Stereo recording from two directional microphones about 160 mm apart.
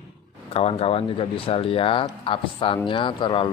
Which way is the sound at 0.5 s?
35° left (ahead or behind).